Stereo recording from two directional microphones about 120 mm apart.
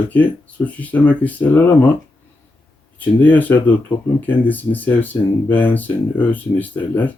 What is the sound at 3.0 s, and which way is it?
Speech, 15° left (ahead or behind).